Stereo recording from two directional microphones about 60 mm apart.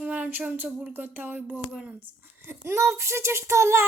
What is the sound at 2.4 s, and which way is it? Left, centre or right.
Speech, right.